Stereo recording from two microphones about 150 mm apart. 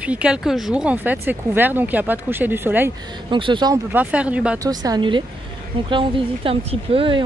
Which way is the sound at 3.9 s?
10° right (ahead or behind).